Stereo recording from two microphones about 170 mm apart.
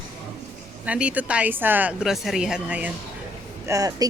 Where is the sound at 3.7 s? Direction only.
20° right (ahead or behind).